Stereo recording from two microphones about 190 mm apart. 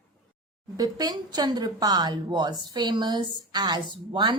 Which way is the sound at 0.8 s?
20° right (ahead or behind).